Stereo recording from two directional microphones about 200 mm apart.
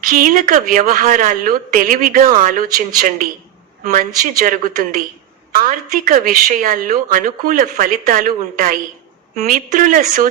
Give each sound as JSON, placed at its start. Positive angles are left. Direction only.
{"t": 0.0, "sound": "a woman's voice", "side_deg": -45}
{"t": 4.4, "sound": "a woman's voice", "side_deg": -40}